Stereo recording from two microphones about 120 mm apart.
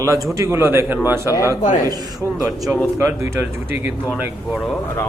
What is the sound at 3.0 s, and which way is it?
Speech, 20° right (ahead or behind).